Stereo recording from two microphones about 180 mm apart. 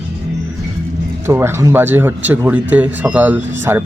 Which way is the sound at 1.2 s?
15° right (ahead or behind).